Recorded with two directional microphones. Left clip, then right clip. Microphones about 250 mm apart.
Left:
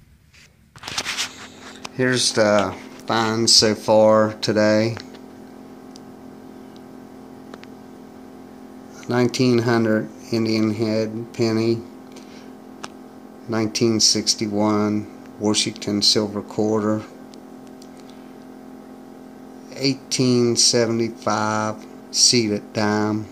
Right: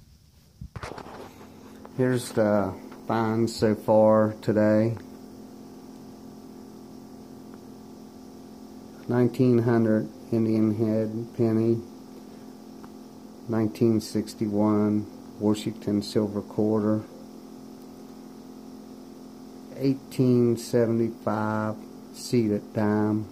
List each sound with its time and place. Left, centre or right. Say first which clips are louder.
2.0 s speech: left 6 dB; centre
9.0 s speech: left 4 dB; centre
13.5 s speech: left 4 dB; centre
19.8 s speech: left 5 dB; centre